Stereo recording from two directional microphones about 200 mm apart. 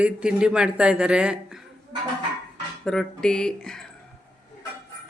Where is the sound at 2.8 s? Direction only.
5° left (ahead or behind).